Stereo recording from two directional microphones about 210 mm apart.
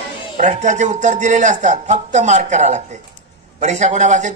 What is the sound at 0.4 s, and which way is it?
A man's voice, 35° right (ahead or behind).